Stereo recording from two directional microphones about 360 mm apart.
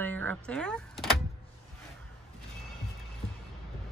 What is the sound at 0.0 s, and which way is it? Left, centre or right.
Power windows, centre.